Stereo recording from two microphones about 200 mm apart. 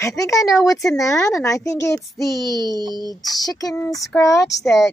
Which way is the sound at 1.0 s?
15° left (ahead or behind).